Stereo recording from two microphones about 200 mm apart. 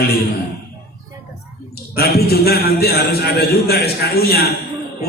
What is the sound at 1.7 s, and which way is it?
A man's voice, 50° left (ahead or behind).